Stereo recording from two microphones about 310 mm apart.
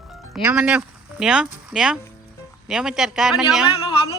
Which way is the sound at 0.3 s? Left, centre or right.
Centre.